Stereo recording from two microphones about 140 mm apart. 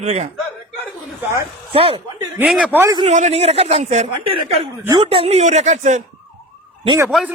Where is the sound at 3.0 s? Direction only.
55° right (ahead or behind).